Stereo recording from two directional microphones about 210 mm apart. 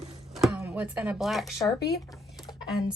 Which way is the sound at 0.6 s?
5° right (ahead or behind).